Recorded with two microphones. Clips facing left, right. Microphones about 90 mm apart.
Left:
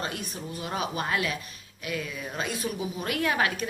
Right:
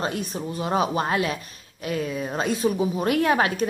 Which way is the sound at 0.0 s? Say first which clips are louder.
Right 7 dB; 30° right (ahead or behind).